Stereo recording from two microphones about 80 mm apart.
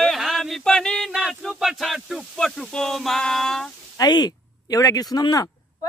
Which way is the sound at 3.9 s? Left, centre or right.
Left.